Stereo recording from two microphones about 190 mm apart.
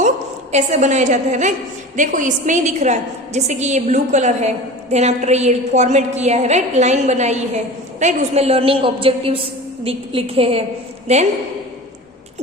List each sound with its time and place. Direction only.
0.5 s a woman's voice: 40° right (ahead or behind)